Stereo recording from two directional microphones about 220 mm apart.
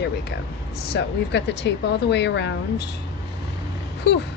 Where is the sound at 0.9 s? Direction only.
50° left (ahead or behind).